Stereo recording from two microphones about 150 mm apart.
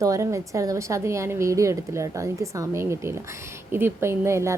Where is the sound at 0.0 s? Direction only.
20° right (ahead or behind).